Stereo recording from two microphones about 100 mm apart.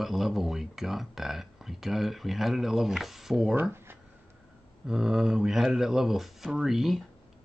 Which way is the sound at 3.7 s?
25° right (ahead or behind).